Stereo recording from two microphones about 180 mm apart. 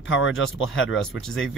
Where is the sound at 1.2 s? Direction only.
5° left (ahead or behind).